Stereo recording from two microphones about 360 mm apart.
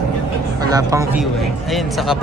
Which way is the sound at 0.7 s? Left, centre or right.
Centre.